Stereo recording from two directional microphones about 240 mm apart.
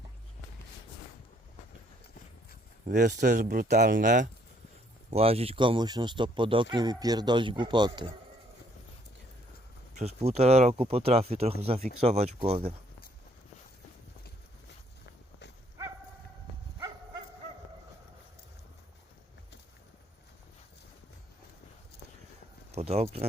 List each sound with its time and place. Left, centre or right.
2.8 s speech: right
9.9 s speech: right
22.7 s a sound: right